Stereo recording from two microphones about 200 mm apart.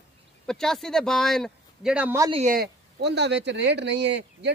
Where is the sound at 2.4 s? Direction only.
50° right (ahead or behind).